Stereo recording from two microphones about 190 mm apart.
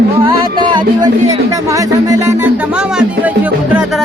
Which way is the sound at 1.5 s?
15° right (ahead or behind).